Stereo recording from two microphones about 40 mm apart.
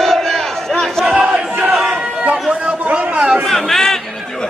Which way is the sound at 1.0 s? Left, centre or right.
Right.